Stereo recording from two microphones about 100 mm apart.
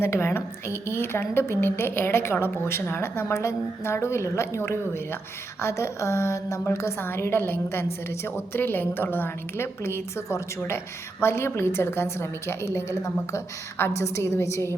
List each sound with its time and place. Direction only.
0.0 s a woman's voice: 25° left (ahead or behind)